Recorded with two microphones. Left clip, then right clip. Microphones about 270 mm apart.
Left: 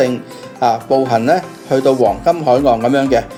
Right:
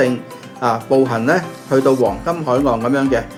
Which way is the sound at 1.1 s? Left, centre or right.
Centre.